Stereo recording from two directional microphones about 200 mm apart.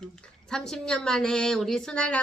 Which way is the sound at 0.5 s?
5° left (ahead or behind).